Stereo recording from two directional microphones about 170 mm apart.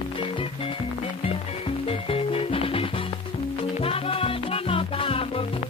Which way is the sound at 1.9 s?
35° left (ahead or behind).